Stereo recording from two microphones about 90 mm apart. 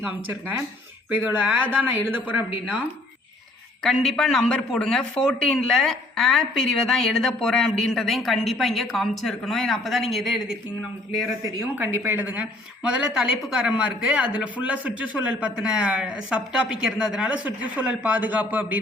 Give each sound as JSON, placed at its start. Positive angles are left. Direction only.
{"t": 1.2, "sound": "speech", "side_deg": -15}
{"t": 3.8, "sound": "a man's voice", "side_deg": 5}
{"t": 11.7, "sound": "speech", "side_deg": -20}